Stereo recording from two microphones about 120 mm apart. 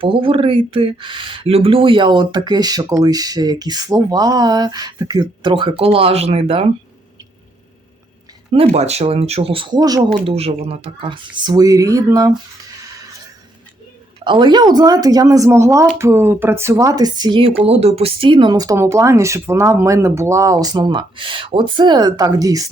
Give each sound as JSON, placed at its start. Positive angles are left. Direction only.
{"t": 0.0, "sound": "speech", "side_deg": -45}
{"t": 8.5, "sound": "speech", "side_deg": -60}
{"t": 10.2, "sound": "speech", "side_deg": -55}
{"t": 14.3, "sound": "speech", "side_deg": -40}
{"t": 17.6, "sound": "speech", "side_deg": -55}